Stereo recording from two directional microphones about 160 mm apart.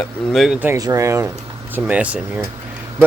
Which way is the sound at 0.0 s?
Centre (ahead or behind).